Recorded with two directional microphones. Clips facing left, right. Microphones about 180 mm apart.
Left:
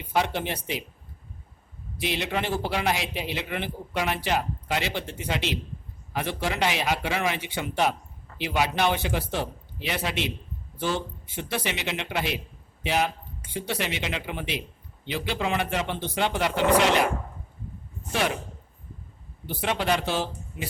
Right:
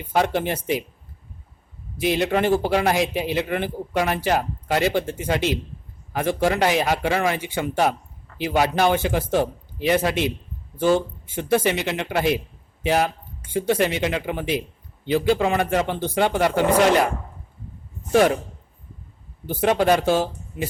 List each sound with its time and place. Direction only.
0.1 s a man's voice: 45° right (ahead or behind)
2.0 s a man's voice: 45° right (ahead or behind)
18.1 s a man's voice: 45° right (ahead or behind)
19.5 s a man's voice: 45° right (ahead or behind)